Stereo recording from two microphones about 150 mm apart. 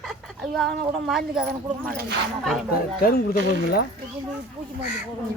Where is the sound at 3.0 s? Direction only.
80° left.